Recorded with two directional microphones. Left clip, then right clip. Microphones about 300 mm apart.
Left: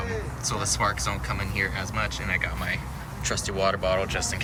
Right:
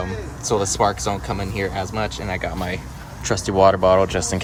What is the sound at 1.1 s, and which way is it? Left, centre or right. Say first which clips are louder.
Speech: right 5 dB; centre.